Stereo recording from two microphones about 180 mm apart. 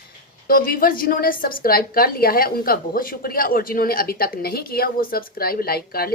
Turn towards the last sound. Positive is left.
turn(degrees=60)  # may be behind; listen again after turning